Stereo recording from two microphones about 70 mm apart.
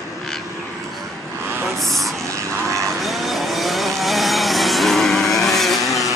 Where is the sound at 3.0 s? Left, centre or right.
Centre.